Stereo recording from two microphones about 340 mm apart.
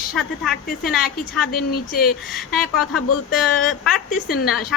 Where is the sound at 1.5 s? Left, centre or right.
Left.